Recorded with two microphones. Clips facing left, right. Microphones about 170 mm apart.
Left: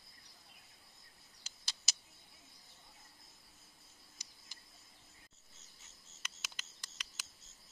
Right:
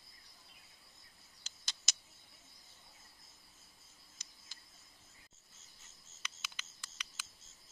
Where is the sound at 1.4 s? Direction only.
5° left (ahead or behind).